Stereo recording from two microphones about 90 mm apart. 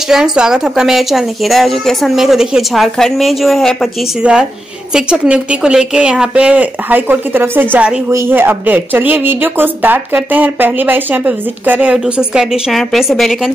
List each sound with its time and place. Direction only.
0.1 s a woman's voice: 5° right (ahead or behind)
4.2 s a woman's voice: 10° right (ahead or behind)
8.1 s speech: 30° right (ahead or behind)
12.0 s a woman's voice: 5° right (ahead or behind)